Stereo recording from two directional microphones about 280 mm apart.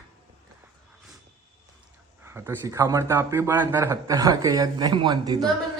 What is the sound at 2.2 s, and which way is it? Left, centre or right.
Speech, centre.